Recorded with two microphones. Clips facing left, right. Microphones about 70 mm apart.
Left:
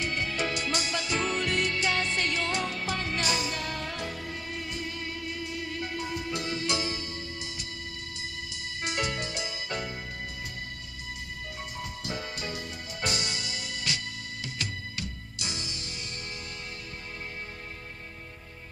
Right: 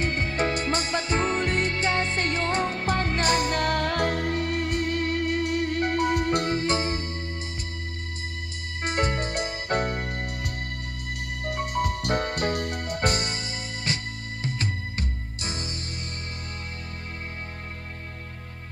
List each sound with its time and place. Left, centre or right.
0.0 s music: right
8.8 s music: right